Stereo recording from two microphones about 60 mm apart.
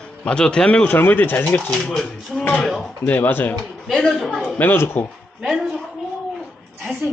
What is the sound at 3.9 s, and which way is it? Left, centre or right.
Speech, centre.